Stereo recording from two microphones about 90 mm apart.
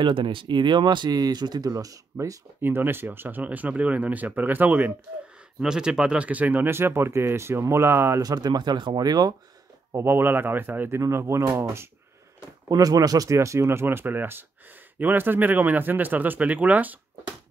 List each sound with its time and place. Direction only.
0.0 s speech: 70° right (ahead or behind); by 2.3 s 40° right (ahead or behind)
2.6 s speech: 25° right (ahead or behind)
5.6 s speech: 5° right (ahead or behind); by 8.2 s 30° right (ahead or behind)
8.2 s speech: 45° right (ahead or behind)
9.9 s speech: 25° right (ahead or behind)
12.6 s speech: 45° right (ahead or behind); by 17.0 s 20° right (ahead or behind)